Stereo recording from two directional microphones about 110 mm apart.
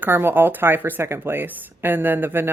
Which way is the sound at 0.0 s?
20° right (ahead or behind).